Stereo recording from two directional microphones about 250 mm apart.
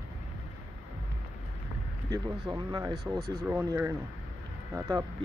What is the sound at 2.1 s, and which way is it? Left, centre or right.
Speech, centre.